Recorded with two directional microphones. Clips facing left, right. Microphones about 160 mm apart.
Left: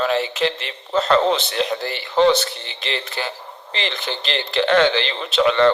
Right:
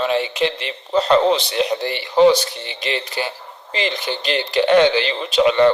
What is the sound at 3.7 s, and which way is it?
Speech, 15° right (ahead or behind).